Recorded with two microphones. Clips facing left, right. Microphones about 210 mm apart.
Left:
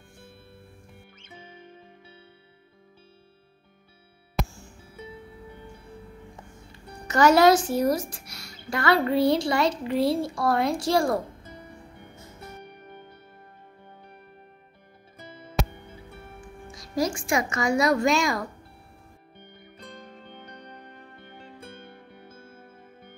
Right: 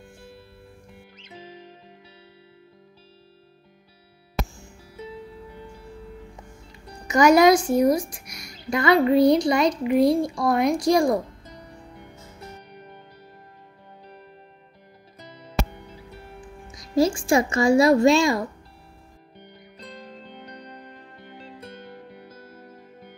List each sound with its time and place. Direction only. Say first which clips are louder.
7.1 s a woman's voice: right 2 dB; 15° right (ahead or behind)
16.7 s speech: right 6 dB; 25° right (ahead or behind)